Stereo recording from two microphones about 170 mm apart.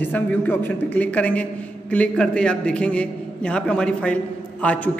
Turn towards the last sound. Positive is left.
turn(degrees=10)  # may be behind; listen again after turning